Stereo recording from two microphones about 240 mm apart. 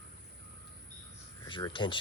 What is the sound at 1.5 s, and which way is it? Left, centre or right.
Speech, centre.